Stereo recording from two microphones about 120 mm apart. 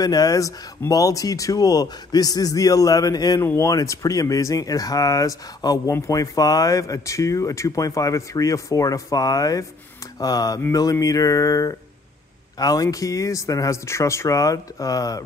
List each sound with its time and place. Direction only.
0.0 s speech: 30° left (ahead or behind)